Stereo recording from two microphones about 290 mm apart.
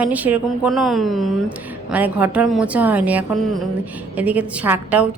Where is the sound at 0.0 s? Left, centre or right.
Centre.